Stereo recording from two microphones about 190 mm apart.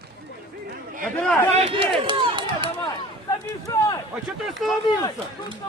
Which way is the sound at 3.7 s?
20° left (ahead or behind).